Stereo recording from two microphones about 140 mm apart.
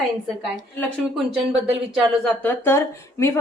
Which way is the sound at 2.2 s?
10° left (ahead or behind).